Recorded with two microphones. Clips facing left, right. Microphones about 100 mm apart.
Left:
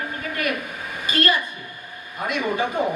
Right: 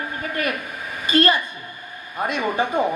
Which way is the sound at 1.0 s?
30° right (ahead or behind).